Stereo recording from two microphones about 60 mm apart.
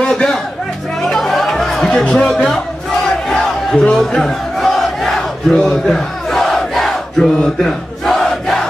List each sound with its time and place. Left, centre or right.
0.0 s music: centre
1.0 s chatter: centre
3.3 s a sound: centre
3.9 s battle cry: centre
5.5 s battle cry: centre
5.9 s battle cry: centre